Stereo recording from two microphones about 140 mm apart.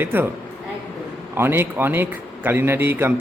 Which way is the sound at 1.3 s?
15° right (ahead or behind).